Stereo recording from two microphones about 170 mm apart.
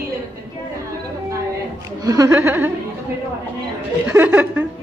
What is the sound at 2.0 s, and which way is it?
Speech, 20° right (ahead or behind).